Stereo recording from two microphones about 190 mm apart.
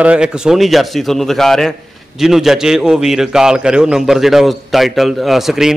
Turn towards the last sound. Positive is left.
turn(degrees=0)  # may be behind; listen again after turning